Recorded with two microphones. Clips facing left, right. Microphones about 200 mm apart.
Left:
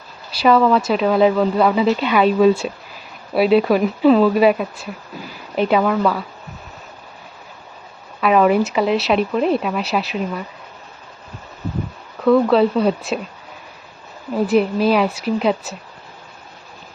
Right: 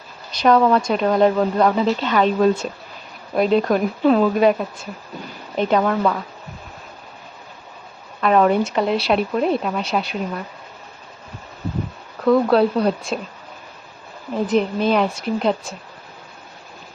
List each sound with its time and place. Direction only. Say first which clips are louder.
0.3 s speech: left 1 dB; 5° left (ahead or behind)
8.2 s speech: left 1 dB; 5° left (ahead or behind)
12.2 s speech: left 2 dB; centre (ahead or behind)
14.3 s speech: left 3 dB; 5° left (ahead or behind)